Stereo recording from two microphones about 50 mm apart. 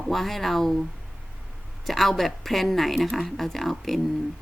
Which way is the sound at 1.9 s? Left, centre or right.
Centre.